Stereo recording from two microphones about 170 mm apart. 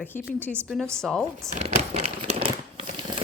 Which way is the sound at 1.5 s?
40° right (ahead or behind).